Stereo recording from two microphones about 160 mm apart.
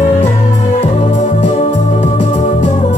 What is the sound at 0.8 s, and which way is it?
Organ, 45° left (ahead or behind).